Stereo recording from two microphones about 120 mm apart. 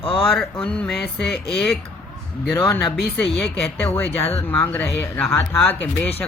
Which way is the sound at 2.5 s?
20° left (ahead or behind).